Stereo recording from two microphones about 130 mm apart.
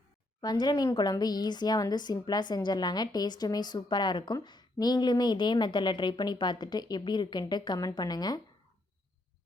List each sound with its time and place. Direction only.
0.4 s a woman's voice: 30° left (ahead or behind)